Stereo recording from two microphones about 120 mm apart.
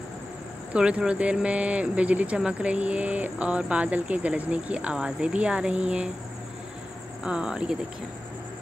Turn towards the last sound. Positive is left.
turn(degrees=-5)  # may be behind; listen again after turning